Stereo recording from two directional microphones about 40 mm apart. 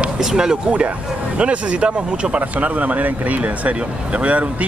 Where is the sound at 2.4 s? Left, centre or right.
Right.